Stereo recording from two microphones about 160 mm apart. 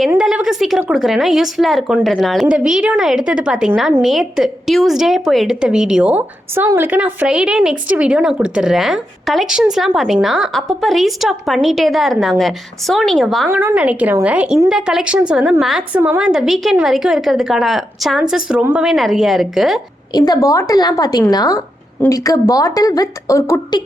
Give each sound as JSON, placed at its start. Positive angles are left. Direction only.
{"t": 0.2, "sound": "a sound", "side_deg": -5}
{"t": 0.8, "sound": "a woman's voice", "side_deg": -5}
{"t": 13.5, "sound": "a woman's voice", "side_deg": -10}
{"t": 20.1, "sound": "speech", "side_deg": 25}